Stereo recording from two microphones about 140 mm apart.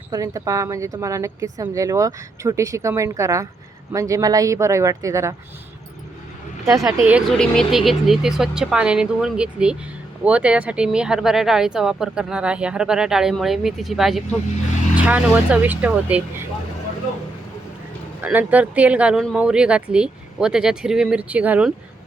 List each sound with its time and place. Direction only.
0.1 s a woman's voice: 25° right (ahead or behind)
6.7 s a woman's voice: 25° right (ahead or behind)
7.0 s speech: 10° right (ahead or behind)
7.3 s speech: 5° left (ahead or behind)
18.2 s speech: 10° right (ahead or behind)